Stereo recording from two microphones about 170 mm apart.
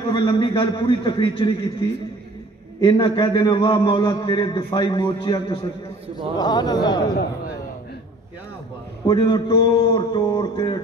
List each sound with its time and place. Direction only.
0.1 s a man's voice: 30° left (ahead or behind)
2.8 s a man's voice: 25° left (ahead or behind)
9.0 s a man's voice: 25° left (ahead or behind)